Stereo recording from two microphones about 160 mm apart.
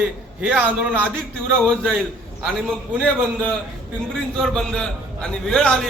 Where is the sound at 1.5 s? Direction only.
5° left (ahead or behind).